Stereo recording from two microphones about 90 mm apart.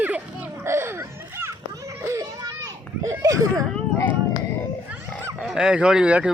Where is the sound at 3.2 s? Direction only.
40° right (ahead or behind).